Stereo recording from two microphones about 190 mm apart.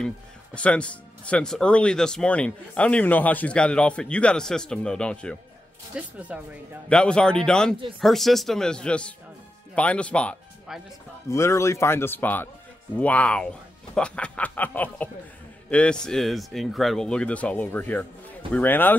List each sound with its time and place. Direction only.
0.6 s speech: 5° left (ahead or behind)
5.9 s speech: 5° right (ahead or behind)
6.9 s speech: 5° left (ahead or behind)